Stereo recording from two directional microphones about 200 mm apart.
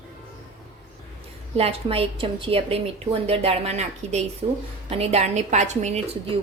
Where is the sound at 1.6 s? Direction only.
30° right (ahead or behind).